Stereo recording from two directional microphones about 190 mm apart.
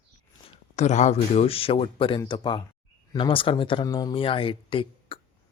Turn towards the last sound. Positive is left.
turn(degrees=30)  # may be behind; listen again after turning